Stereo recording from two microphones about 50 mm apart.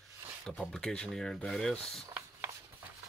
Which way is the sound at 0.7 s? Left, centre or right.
Centre.